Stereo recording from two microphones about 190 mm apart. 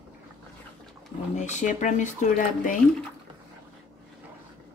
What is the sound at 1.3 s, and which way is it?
Speech, 40° left (ahead or behind).